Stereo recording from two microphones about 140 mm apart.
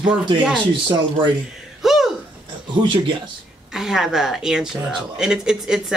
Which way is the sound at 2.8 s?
30° right (ahead or behind).